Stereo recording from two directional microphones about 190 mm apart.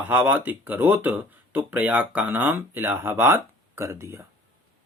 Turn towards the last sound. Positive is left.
turn(degrees=-15)  # may be behind; listen again after turning